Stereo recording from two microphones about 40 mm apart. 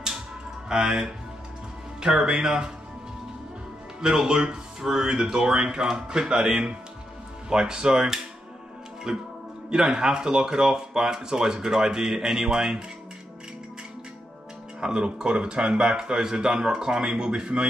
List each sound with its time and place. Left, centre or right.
0.7 s speech: centre
2.1 s speech: centre
4.0 s speech: centre
14.8 s speech: right